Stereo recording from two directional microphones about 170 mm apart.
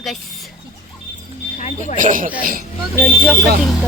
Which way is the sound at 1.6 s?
45° left (ahead or behind).